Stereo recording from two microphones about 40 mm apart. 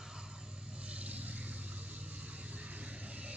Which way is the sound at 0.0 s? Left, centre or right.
Centre.